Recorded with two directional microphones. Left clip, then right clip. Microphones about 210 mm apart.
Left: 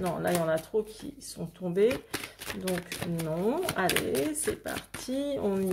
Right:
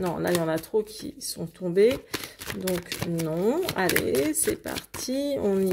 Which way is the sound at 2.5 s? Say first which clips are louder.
Right 4 dB; 20° right (ahead or behind).